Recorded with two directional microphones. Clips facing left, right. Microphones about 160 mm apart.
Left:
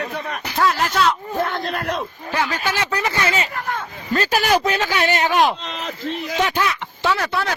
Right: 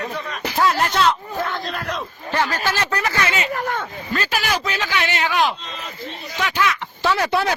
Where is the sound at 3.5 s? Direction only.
55° right (ahead or behind).